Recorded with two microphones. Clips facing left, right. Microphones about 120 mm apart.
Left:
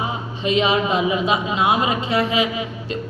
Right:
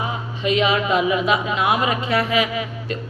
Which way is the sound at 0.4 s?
30° left (ahead or behind).